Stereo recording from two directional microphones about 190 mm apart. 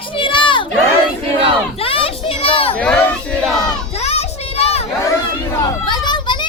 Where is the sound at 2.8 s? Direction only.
10° left (ahead or behind).